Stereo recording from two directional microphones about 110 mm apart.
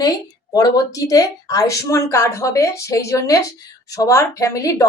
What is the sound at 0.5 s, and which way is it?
A woman's voice, 35° left (ahead or behind).